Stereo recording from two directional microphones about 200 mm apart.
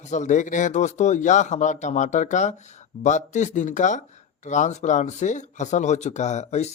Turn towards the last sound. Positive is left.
turn(degrees=35)  # may be behind; listen again after turning